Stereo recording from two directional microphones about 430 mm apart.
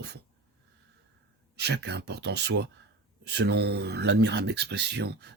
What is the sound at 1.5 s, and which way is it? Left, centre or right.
Speech, right.